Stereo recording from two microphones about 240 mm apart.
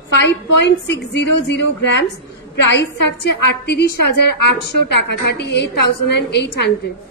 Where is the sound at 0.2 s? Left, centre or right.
Left.